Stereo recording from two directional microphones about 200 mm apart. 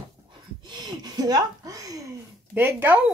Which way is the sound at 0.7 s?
20° right (ahead or behind).